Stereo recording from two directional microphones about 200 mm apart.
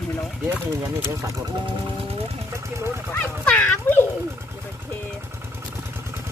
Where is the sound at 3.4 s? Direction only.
10° left (ahead or behind).